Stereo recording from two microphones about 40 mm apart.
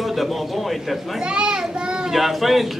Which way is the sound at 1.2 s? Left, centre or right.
Right.